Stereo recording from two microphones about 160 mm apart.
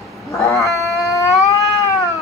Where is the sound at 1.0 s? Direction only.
20° left (ahead or behind).